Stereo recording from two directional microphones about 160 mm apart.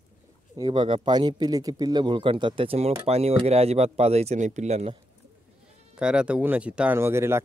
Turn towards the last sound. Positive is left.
turn(degrees=-15)  # may be behind; listen again after turning